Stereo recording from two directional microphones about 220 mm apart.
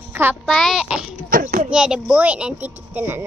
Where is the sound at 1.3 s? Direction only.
40° right (ahead or behind).